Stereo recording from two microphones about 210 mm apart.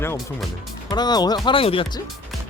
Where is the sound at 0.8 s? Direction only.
20° left (ahead or behind).